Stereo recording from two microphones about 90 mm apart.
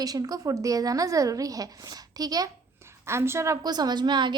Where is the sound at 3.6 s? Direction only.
50° right (ahead or behind).